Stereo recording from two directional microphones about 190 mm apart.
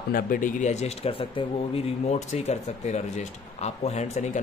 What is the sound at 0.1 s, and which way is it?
Speech, 45° left (ahead or behind).